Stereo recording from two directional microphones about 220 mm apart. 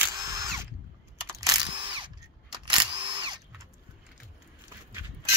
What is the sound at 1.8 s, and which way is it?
Drill, 25° right (ahead or behind).